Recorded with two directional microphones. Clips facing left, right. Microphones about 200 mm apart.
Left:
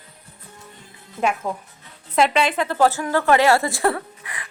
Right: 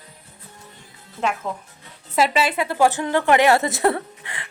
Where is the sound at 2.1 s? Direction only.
5° right (ahead or behind); by 4.5 s 25° right (ahead or behind).